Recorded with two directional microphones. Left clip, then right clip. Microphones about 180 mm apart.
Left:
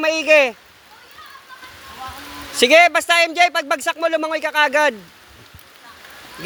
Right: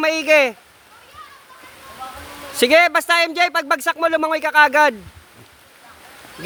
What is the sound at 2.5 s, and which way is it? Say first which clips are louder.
Speech: left 2 dB; 20° right (ahead or behind).